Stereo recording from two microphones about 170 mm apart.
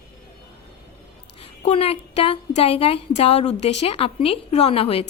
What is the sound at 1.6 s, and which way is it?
A woman's voice, 35° left (ahead or behind).